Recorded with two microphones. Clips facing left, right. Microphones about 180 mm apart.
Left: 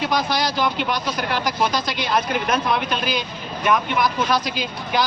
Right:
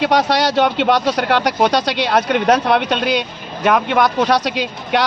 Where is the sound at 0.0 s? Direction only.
75° right (ahead or behind).